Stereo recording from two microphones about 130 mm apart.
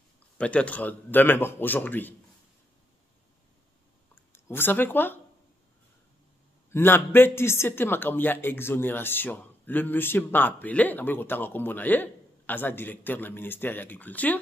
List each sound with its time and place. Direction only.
0.4 s speech: 10° left (ahead or behind)
4.1 s speech: 15° left (ahead or behind)
6.7 s speech: 15° left (ahead or behind)